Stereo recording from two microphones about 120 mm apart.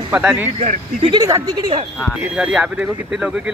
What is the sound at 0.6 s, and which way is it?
Speech, 65° right (ahead or behind).